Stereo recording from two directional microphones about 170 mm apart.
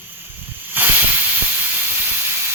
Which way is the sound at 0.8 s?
10° right (ahead or behind).